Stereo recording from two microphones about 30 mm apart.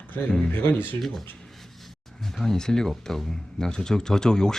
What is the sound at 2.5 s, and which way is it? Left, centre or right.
Speech, centre.